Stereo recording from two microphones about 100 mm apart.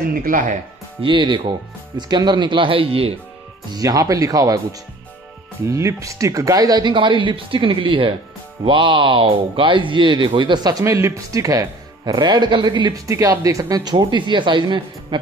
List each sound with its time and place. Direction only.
1.0 s a woman's voice: 55° right (ahead or behind); by 3.2 s 75° right (ahead or behind)
3.7 s speech: 35° right (ahead or behind)
5.7 s speech: 30° right (ahead or behind)
6.9 s a woman's voice: 55° right (ahead or behind)
13.0 s speech: 35° right (ahead or behind); by 15.1 s 50° right (ahead or behind)